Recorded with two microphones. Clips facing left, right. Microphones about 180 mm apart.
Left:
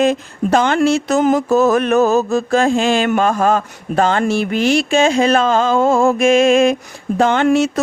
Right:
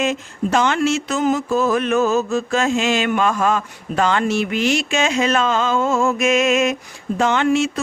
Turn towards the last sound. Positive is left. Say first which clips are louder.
# left 4 dB
turn(degrees=40)  # may be behind; listen again after turning